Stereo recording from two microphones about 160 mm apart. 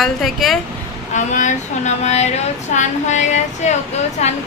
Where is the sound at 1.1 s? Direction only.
50° left (ahead or behind).